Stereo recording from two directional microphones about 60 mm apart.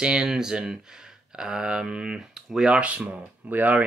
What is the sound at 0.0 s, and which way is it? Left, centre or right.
Speech, centre.